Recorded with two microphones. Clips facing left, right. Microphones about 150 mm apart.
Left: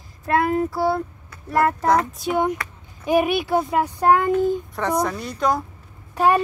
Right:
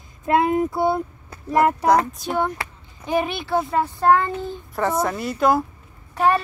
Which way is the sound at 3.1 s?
10° left (ahead or behind).